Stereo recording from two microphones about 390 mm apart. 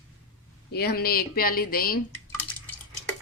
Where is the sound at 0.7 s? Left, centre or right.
Left.